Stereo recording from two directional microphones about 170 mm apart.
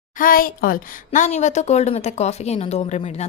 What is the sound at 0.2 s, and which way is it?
A woman's voice, 55° left (ahead or behind).